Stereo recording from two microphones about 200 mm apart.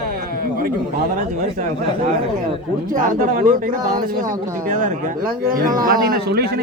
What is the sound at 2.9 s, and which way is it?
Speech, 40° right (ahead or behind).